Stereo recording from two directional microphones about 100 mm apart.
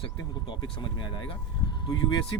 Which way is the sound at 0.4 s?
50° left (ahead or behind).